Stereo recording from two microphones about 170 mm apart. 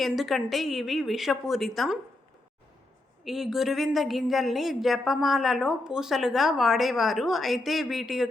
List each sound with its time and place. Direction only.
0.0 s a woman's voice: centre (ahead or behind)
3.2 s a woman's voice: centre (ahead or behind)